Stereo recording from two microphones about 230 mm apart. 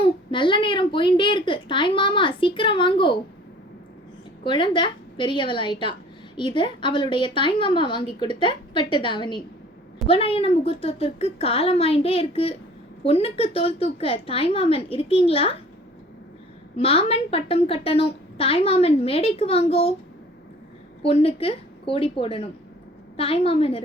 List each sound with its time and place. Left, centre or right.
0.0 s a woman's voice: left
4.4 s a woman's voice: left
16.7 s a woman's voice: left
21.0 s a woman's voice: left